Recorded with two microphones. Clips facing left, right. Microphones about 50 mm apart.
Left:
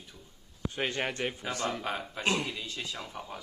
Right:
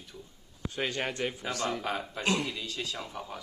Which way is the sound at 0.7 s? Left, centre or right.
Left.